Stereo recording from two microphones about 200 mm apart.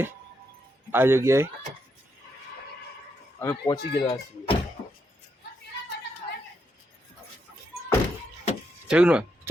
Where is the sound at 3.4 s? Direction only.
15° left (ahead or behind).